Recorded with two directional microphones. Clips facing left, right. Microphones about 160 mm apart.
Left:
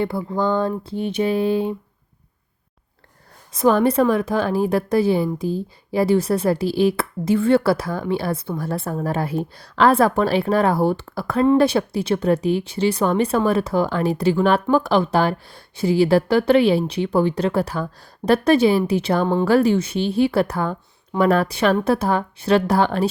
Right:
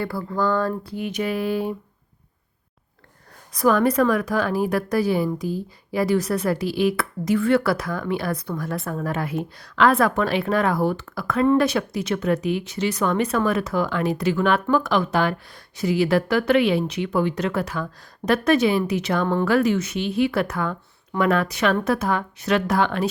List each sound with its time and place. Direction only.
0.0 s a woman's voice: 20° left (ahead or behind)
3.5 s a woman's voice: 25° left (ahead or behind)